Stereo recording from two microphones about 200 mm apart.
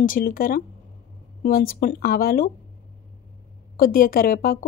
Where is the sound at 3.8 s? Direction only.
45° left (ahead or behind).